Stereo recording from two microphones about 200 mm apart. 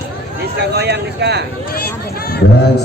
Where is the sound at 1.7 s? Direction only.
50° left (ahead or behind).